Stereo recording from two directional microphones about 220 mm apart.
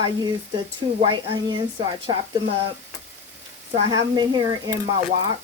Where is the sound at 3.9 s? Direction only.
15° right (ahead or behind).